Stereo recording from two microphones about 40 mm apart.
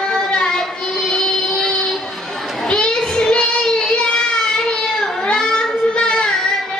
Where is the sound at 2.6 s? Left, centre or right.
Centre.